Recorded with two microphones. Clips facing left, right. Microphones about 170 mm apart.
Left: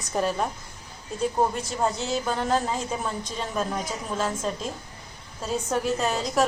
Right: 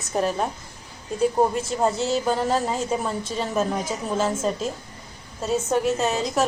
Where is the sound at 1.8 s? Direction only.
5° right (ahead or behind).